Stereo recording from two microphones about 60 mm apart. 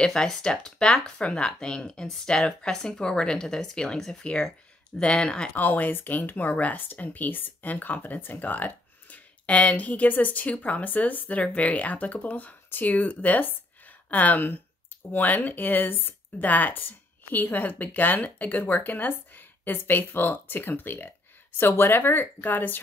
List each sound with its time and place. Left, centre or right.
0.0 s speech: centre
5.5 s speech: left